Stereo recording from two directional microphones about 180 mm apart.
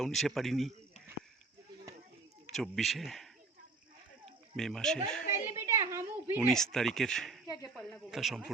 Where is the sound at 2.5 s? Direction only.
Centre (ahead or behind).